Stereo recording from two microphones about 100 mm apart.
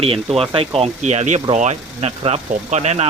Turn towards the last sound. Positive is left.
turn(degrees=-90)